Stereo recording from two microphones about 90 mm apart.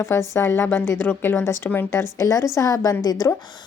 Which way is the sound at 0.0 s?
30° left (ahead or behind).